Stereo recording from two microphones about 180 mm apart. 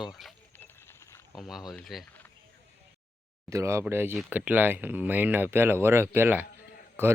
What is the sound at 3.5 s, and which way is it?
Speech, 15° right (ahead or behind).